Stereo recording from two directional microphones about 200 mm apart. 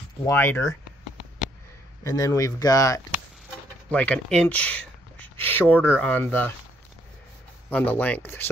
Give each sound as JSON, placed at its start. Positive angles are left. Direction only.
{"t": 0.2, "sound": "speech", "side_deg": 10}
{"t": 2.0, "sound": "speech", "side_deg": 15}
{"t": 3.9, "sound": "speech", "side_deg": 5}
{"t": 7.7, "sound": "speech", "side_deg": 10}